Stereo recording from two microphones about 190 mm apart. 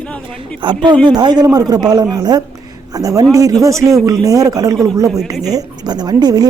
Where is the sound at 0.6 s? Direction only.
25° right (ahead or behind).